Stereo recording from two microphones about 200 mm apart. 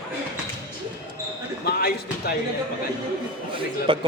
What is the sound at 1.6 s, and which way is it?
Basketball bounce, 50° left (ahead or behind).